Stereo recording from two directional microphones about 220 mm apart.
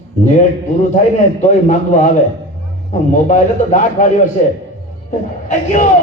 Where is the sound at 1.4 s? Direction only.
35° left (ahead or behind).